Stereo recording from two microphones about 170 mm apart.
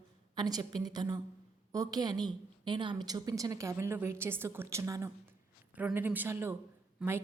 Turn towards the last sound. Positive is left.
turn(degrees=-15)  # may be behind; listen again after turning